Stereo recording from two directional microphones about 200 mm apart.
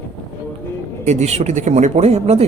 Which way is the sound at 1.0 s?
35° right (ahead or behind).